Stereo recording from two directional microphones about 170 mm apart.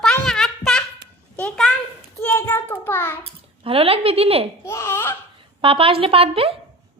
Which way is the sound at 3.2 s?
35° right (ahead or behind).